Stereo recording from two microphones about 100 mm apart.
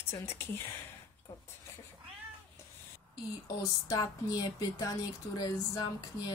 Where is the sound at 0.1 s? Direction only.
25° left (ahead or behind).